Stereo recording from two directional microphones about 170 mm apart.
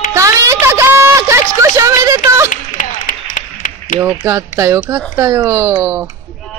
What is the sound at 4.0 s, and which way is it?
Speech, 15° right (ahead or behind).